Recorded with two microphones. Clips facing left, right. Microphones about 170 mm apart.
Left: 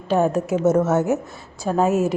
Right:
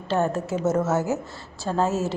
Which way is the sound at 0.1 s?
15° left (ahead or behind).